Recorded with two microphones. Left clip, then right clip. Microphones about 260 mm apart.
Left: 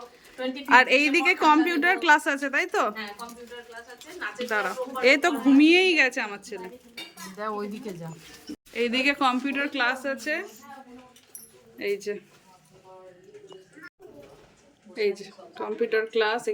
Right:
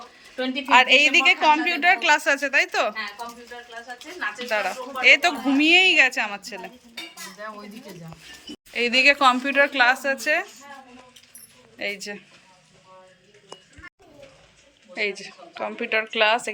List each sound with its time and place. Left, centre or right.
0.6 s a woman's voice: centre
4.4 s a woman's voice: centre
8.7 s a woman's voice: centre
11.8 s a woman's voice: centre
14.9 s a woman's voice: centre